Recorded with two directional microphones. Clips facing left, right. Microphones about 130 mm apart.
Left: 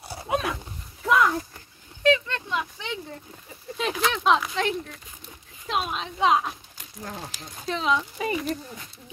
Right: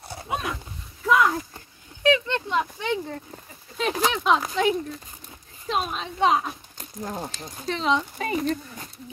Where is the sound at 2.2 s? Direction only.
25° right (ahead or behind).